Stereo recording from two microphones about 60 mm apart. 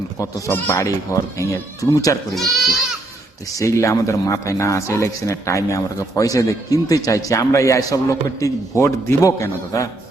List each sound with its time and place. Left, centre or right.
0.2 s a man's voice: left
1.8 s speech: left
2.3 s speech: centre
3.4 s a man's voice: left